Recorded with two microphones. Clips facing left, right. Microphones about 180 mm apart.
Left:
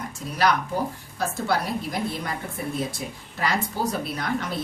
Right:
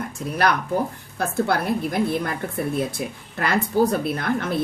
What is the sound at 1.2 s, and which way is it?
A woman's voice, 55° right (ahead or behind).